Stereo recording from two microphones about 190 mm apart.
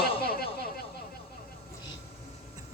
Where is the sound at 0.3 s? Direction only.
55° left (ahead or behind).